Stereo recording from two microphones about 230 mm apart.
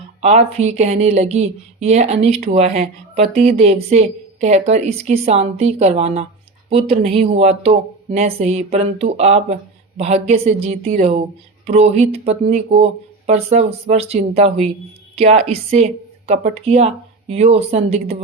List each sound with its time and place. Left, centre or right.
0.2 s a woman's voice: right